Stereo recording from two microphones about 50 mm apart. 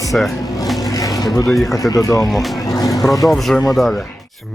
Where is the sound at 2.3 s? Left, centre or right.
Centre.